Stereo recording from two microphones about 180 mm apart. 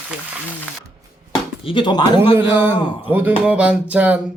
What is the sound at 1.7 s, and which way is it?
Speech, 25° left (ahead or behind).